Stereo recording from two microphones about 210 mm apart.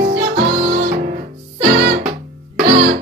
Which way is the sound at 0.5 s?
40° right (ahead or behind).